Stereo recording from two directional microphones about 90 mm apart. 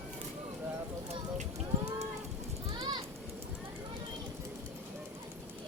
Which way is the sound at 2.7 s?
60° right (ahead or behind).